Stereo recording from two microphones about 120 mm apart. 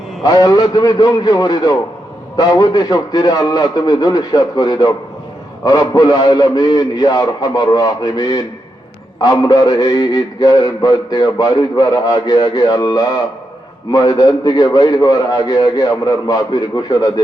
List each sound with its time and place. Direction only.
0.2 s a man's voice: 30° left (ahead or behind)